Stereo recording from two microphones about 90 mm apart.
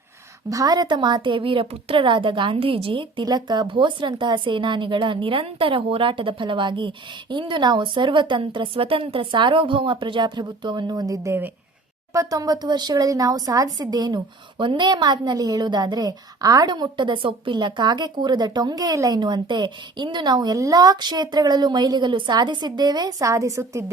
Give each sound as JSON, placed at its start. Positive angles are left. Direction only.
{"t": 0.5, "sound": "a woman's voice", "side_deg": -45}
{"t": 3.2, "sound": "a woman's voice", "side_deg": -55}
{"t": 14.6, "sound": "a woman's voice", "side_deg": -60}